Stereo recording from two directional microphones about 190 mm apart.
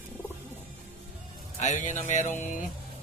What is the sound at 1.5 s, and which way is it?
Music, 40° left (ahead or behind).